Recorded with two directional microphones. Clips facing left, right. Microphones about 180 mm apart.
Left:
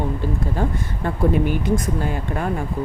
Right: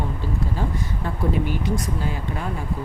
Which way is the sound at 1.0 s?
55° left (ahead or behind).